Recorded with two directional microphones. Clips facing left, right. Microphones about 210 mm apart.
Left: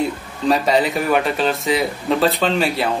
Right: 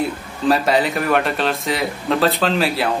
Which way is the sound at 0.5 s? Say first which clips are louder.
Even; centre (ahead or behind).